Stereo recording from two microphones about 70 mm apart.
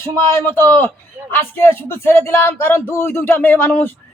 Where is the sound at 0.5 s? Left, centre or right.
Left.